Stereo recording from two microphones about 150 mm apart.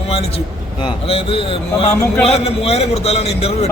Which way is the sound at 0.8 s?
40° left (ahead or behind).